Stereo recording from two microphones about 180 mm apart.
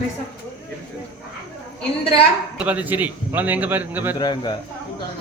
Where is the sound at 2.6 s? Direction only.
10° right (ahead or behind).